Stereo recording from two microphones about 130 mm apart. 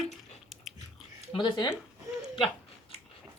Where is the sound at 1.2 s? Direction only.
40° left (ahead or behind).